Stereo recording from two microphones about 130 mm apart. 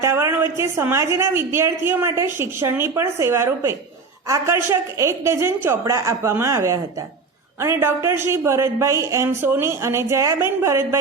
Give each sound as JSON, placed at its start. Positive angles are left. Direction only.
{"t": 0.0, "sound": "a woman's voice", "side_deg": -20}